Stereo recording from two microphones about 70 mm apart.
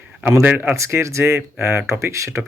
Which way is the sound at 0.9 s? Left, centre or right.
Right.